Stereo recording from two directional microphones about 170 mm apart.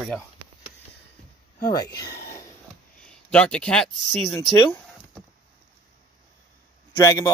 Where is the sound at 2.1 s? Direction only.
20° left (ahead or behind).